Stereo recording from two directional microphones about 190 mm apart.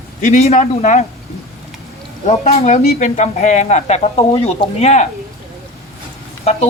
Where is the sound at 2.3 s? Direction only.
35° left (ahead or behind).